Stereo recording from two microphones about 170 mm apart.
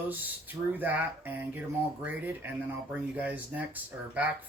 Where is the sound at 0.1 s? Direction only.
10° right (ahead or behind).